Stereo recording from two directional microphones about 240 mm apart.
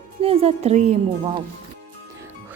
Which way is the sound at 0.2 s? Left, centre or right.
Right.